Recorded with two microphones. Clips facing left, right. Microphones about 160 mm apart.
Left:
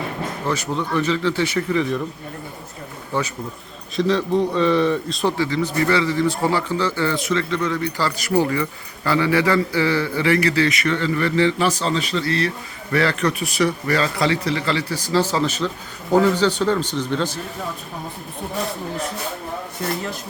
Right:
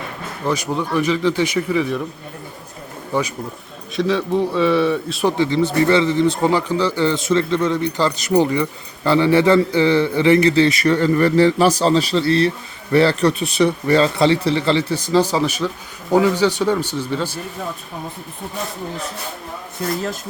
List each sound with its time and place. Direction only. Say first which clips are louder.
0.4 s speech: right 4 dB; 15° right (ahead or behind)
3.1 s speech: right 3 dB; 15° right (ahead or behind)
3.9 s a man's voice: even; 5° right (ahead or behind)
5.4 s a man's voice: right 4 dB; 25° right (ahead or behind); by 17.4 s 10° right (ahead or behind)